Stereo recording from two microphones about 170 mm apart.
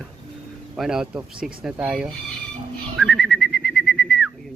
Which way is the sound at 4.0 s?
5° left (ahead or behind).